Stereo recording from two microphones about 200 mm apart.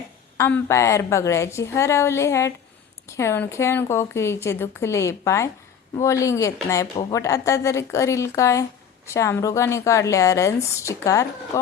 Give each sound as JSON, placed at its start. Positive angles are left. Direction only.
{"t": 0.3, "sound": "speech", "side_deg": 10}